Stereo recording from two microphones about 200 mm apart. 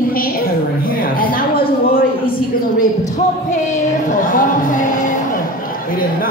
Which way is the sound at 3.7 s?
40° left (ahead or behind).